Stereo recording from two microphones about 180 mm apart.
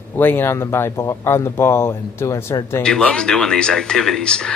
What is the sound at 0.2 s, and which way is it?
Speech, 10° left (ahead or behind).